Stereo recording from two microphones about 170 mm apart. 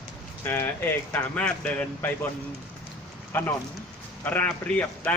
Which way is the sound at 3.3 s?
15° left (ahead or behind).